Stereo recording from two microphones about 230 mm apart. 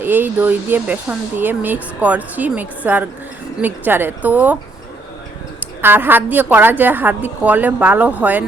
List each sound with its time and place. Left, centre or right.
0.0 s speech: centre
5.8 s speech: centre